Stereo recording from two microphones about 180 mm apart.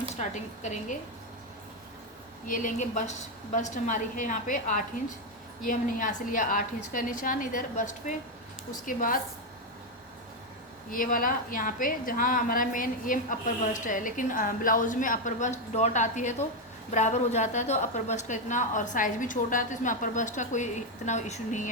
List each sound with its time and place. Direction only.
0.2 s a woman's voice: 40° left (ahead or behind)
2.5 s a woman's voice: 45° left (ahead or behind)
10.9 s a woman's voice: 50° left (ahead or behind)